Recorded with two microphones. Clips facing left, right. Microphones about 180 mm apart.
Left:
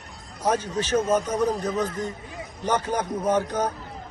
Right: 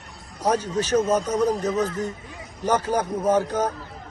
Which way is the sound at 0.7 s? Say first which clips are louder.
Right 2 dB; 40° right (ahead or behind).